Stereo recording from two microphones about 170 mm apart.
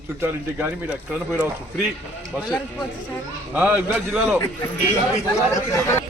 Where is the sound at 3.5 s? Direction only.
10° right (ahead or behind).